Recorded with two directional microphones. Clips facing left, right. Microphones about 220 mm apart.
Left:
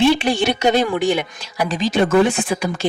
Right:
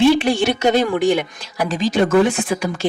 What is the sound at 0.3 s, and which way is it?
Speech, 50° right (ahead or behind).